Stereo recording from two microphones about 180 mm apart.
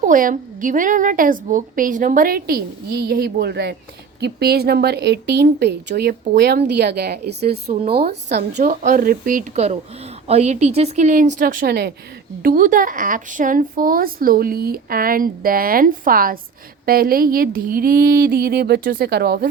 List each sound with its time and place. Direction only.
0.0 s a woman's voice: 50° right (ahead or behind)
8.4 s speech: 45° right (ahead or behind)
10.2 s a woman's voice: 40° right (ahead or behind); by 11.9 s 60° right (ahead or behind)
12.4 s a woman's voice: 50° right (ahead or behind)